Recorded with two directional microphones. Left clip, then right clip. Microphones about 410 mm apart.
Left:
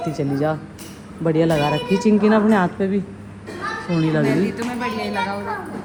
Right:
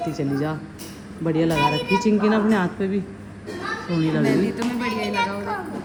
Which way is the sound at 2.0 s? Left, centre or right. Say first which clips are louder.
Left 6 dB; centre.